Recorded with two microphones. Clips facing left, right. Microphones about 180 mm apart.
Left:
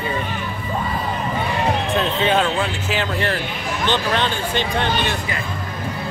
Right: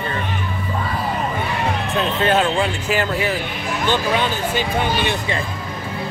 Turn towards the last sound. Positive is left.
turn(degrees=-10)  # may be behind; listen again after turning